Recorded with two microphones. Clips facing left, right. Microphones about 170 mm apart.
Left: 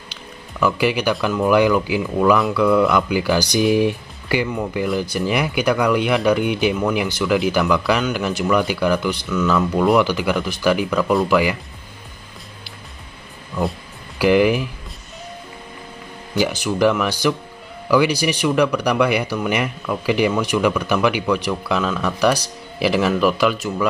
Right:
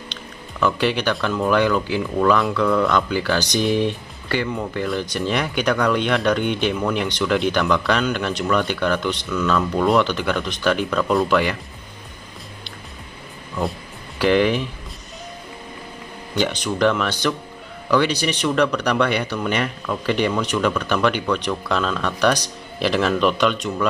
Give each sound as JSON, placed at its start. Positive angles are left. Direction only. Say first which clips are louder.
{"t": 0.1, "sound": "speech", "louder": "even", "side_deg": 5}
{"t": 13.6, "sound": "a sound", "louder": "left 2 dB", "side_deg": 5}
{"t": 16.3, "sound": "speech", "louder": "left 2 dB", "side_deg": 10}